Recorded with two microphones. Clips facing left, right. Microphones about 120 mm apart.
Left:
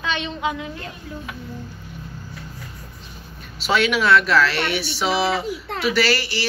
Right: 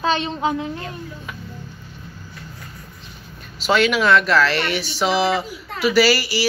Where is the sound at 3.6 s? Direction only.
Centre (ahead or behind).